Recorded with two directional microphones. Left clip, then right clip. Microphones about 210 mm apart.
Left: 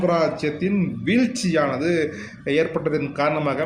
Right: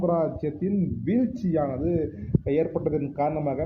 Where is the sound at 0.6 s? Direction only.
15° left (ahead or behind).